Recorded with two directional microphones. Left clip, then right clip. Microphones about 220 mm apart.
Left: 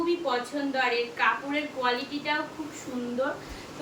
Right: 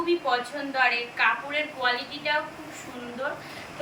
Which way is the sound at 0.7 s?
15° left (ahead or behind).